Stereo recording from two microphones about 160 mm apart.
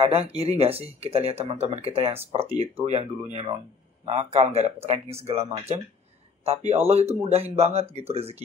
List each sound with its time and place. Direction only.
0.0 s speech: 40° right (ahead or behind)